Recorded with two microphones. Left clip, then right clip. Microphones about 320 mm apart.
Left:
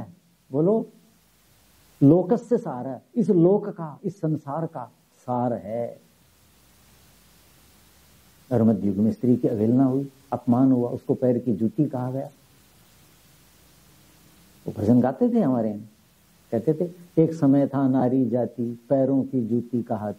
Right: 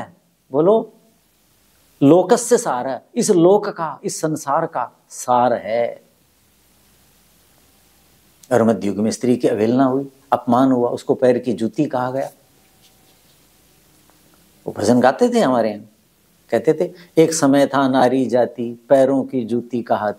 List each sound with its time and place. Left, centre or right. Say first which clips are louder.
0.0 s a sound: right 10 dB; centre
2.2 s speech: right 9 dB; centre
3.3 s speech: right 7 dB; right
3.6 s speech: right 9 dB; centre
8.5 s speech: right 7 dB; centre
11.9 s speech: right 10 dB; centre
14.6 s speech: right 8 dB; centre
19.4 s speech: right 5 dB; right